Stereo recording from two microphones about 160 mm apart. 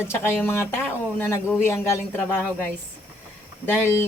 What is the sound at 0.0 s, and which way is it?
Speech, 15° left (ahead or behind).